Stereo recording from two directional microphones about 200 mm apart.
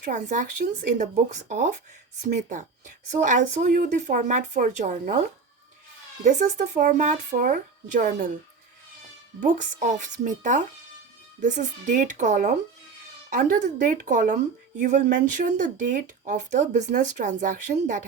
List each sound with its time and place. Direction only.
0.0 s speech: 40° right (ahead or behind)
1.5 s speech: 40° right (ahead or behind)
6.2 s speech: 40° right (ahead or behind)
9.4 s speech: 40° right (ahead or behind)